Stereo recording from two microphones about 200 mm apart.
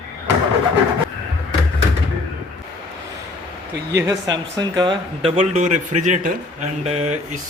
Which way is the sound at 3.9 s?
15° right (ahead or behind).